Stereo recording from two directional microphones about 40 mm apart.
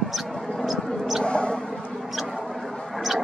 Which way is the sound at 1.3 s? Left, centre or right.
Left.